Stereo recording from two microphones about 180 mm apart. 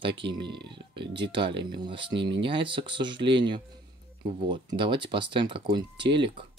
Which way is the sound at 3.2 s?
75° right (ahead or behind).